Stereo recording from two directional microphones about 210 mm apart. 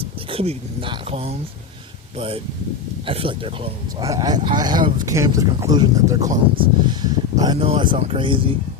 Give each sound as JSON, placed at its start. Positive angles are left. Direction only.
{"t": 0.3, "sound": "speech", "side_deg": -25}